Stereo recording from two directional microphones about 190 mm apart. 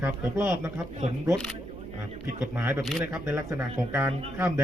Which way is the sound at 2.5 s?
10° right (ahead or behind).